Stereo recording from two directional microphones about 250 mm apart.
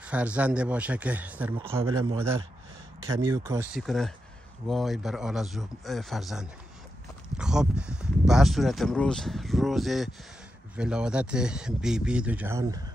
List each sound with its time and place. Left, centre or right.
0.0 s speech: centre
1.5 s a man's voice: right
3.3 s speech: centre
3.7 s speech: centre